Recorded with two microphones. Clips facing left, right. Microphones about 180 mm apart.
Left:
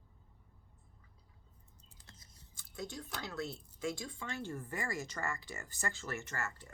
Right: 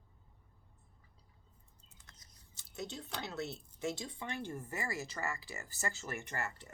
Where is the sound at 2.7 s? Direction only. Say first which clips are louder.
Right 1 dB; 20° right (ahead or behind).